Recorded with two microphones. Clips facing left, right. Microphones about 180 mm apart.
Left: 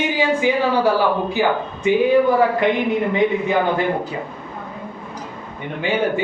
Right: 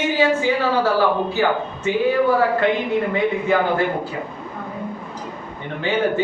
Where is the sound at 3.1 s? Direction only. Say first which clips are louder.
Left 1 dB; 20° left (ahead or behind).